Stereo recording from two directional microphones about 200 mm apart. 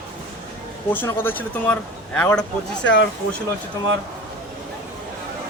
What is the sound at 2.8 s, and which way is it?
Speech, 65° left (ahead or behind).